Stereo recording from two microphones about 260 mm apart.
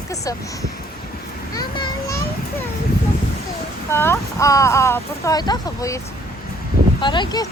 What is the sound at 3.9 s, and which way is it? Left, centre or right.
Speech, centre.